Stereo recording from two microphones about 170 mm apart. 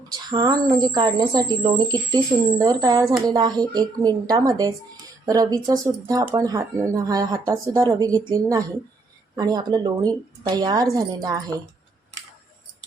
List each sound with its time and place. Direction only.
0.1 s a woman's voice: 25° right (ahead or behind)